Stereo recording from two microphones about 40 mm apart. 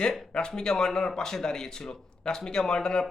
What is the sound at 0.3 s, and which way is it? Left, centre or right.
Speech, centre.